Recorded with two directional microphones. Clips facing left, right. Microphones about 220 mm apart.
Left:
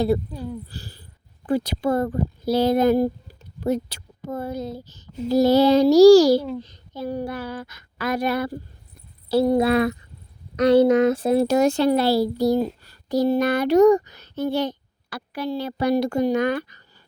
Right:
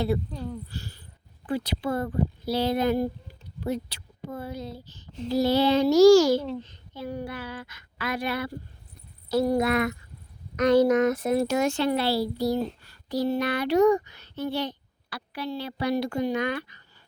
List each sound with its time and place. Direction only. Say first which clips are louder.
0.3 s speech: left 3 dB; 10° left (ahead or behind)
0.7 s speech: even; 35° left (ahead or behind)
9.3 s speech: left 5 dB; 30° left (ahead or behind)